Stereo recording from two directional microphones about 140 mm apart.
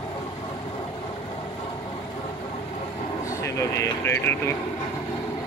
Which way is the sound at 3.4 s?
20° left (ahead or behind).